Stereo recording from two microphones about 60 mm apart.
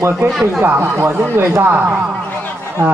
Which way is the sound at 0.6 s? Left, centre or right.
Right.